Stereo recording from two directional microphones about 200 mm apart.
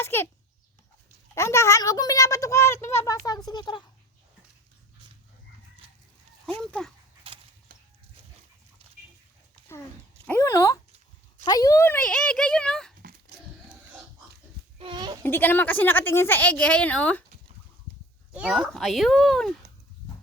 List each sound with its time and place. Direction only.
0.0 s a sound: 10° left (ahead or behind)
1.4 s a woman's voice: 15° left (ahead or behind)
6.6 s a child's voice: 5° left (ahead or behind)
7.3 s a sound: 30° right (ahead or behind)
10.2 s a woman's voice: 15° left (ahead or behind)
13.3 s a sound: 55° right (ahead or behind)
14.8 s goat: 25° right (ahead or behind)
15.2 s a woman's voice: 10° left (ahead or behind)
18.3 s a child's voice: 5° right (ahead or behind)